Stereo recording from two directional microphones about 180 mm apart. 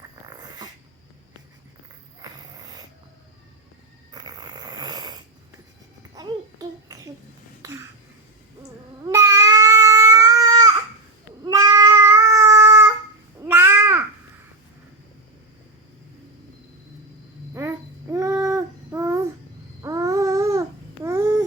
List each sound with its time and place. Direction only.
0.3 s dog: 20° right (ahead or behind)
2.2 s a sound: 20° right (ahead or behind)
4.1 s snoring: 20° right (ahead or behind)
6.1 s babbling: 20° right (ahead or behind)
7.6 s a sound: 15° right (ahead or behind)
9.0 s babbling: 15° right (ahead or behind)
11.4 s cat: 20° right (ahead or behind)
13.4 s crow: 10° right (ahead or behind)
17.5 s babbling: 15° right (ahead or behind)